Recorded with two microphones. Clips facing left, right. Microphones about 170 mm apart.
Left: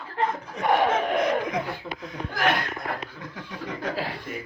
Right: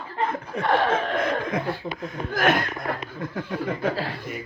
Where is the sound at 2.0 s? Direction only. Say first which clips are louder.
Right 2 dB; 50° right (ahead or behind).